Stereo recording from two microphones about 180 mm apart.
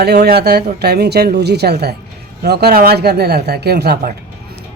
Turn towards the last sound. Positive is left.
turn(degrees=-60)  # may be behind; listen again after turning